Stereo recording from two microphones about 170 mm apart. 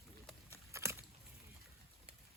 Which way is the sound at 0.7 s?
15° right (ahead or behind).